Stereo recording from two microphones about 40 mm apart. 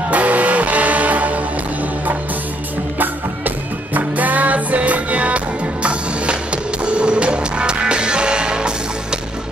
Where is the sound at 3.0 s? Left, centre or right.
Right.